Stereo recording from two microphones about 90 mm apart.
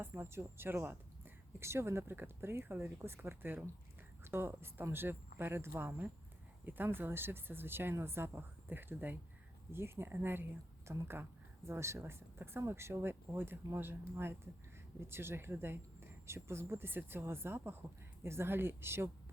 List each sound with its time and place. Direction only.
0.0 s speech: 25° right (ahead or behind)